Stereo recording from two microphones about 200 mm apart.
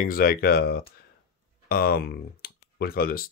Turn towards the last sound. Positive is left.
turn(degrees=50)  # may be behind; listen again after turning